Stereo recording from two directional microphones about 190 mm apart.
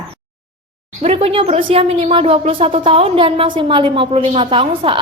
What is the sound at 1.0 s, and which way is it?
A woman's voice, 30° right (ahead or behind).